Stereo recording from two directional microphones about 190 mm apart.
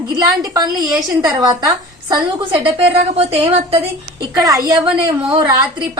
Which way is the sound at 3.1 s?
30° right (ahead or behind).